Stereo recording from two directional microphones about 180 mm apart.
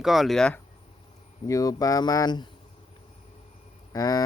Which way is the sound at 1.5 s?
20° left (ahead or behind).